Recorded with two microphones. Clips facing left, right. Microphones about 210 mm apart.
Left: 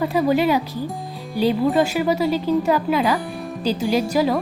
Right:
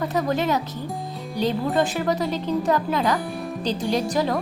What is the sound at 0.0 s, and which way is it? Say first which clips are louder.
Speech: left 5 dB; 10° left (ahead or behind).